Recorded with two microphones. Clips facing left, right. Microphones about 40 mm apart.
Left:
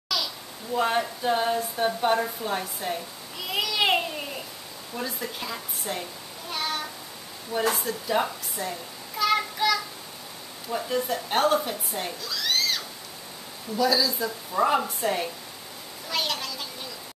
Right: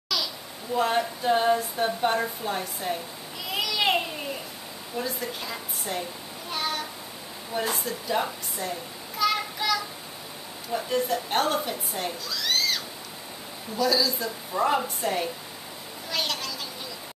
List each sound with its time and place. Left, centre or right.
0.7 s a woman's voice: centre
3.5 s babbling: centre
4.9 s a woman's voice: centre
6.5 s a sound: centre
7.7 s a woman's voice: centre
9.2 s a sound: centre
10.7 s a woman's voice: centre
16.1 s children playing: centre